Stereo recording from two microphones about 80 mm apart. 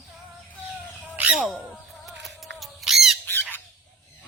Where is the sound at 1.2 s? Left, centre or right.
Centre.